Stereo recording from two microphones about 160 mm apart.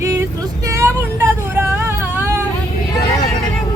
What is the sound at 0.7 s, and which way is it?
Vehicle, 15° right (ahead or behind).